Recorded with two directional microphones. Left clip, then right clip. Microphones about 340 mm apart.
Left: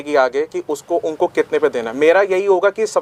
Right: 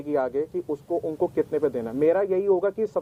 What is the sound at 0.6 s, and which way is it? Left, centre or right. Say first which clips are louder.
Speech: left 8 dB; centre.